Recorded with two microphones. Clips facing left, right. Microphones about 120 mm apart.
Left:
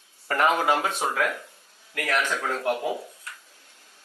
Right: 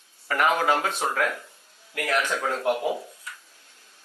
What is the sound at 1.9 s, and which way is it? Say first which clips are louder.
Speech: right 1 dB; 15° right (ahead or behind).